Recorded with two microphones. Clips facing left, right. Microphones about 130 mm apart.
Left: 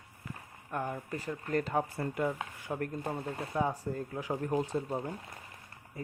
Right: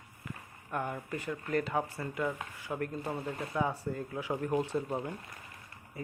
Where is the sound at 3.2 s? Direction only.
35° left (ahead or behind).